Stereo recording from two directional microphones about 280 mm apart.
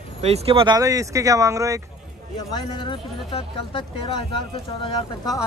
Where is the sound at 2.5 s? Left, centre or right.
Centre.